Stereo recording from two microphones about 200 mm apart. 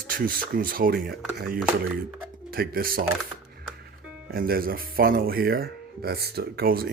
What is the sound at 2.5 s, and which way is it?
Speech, 50° right (ahead or behind).